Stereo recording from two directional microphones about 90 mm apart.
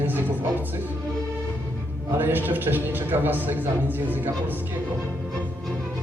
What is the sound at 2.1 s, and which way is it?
A man's voice, 25° right (ahead or behind).